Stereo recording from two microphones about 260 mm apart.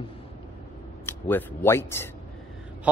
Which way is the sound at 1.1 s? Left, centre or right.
Centre.